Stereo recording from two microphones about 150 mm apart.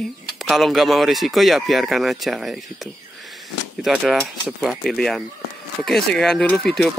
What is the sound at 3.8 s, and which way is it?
Speech, 5° right (ahead or behind).